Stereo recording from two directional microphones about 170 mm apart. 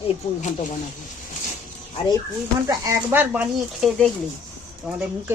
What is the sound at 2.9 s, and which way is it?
Speech, 10° right (ahead or behind).